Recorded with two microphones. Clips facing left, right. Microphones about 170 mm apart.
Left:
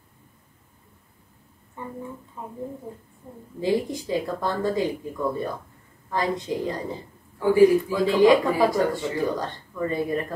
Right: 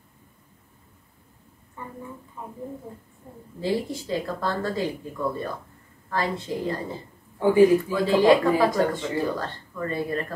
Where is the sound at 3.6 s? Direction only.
15° left (ahead or behind).